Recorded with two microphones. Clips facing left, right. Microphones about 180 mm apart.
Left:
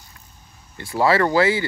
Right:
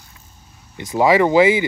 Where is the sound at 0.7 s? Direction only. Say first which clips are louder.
Right 4 dB; 15° right (ahead or behind).